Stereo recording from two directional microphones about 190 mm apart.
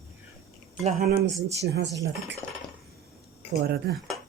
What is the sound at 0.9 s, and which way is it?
Speech, 55° right (ahead or behind).